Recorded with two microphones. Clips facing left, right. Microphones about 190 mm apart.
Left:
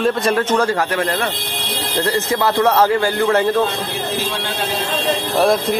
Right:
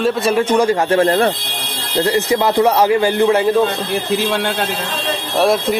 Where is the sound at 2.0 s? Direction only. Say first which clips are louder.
Right 3 dB; 15° right (ahead or behind).